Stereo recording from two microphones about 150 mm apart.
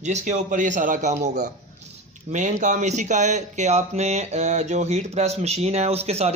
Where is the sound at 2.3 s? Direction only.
55° right (ahead or behind).